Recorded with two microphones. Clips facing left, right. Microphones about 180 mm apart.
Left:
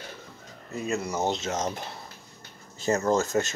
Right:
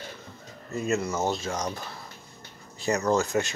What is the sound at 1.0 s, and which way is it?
Speech, 15° left (ahead or behind).